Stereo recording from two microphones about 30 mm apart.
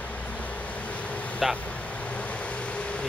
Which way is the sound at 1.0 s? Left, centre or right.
Left.